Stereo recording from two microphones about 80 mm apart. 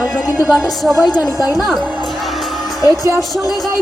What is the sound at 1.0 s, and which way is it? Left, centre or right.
Speech, left.